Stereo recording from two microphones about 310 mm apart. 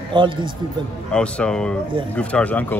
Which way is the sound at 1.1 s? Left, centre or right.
Centre.